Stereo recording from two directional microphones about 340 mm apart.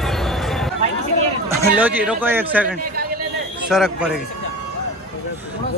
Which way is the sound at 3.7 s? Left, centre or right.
Centre.